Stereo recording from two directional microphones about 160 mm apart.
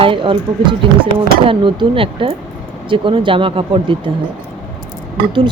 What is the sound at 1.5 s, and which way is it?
Speech, 30° right (ahead or behind).